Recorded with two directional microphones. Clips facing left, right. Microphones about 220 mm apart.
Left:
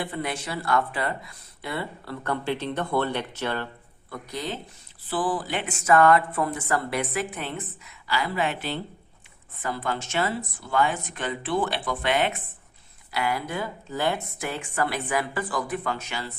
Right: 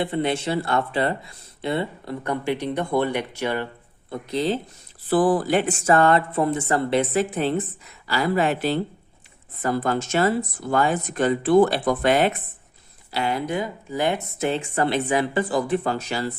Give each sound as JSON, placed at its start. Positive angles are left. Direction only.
{"t": 0.0, "sound": "speech", "side_deg": -25}
{"t": 4.1, "sound": "speech", "side_deg": -25}
{"t": 5.0, "sound": "speech", "side_deg": -45}
{"t": 13.1, "sound": "speech", "side_deg": -25}